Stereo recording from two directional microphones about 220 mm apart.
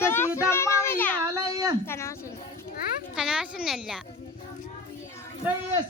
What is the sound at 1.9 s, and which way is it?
Speech, 15° left (ahead or behind).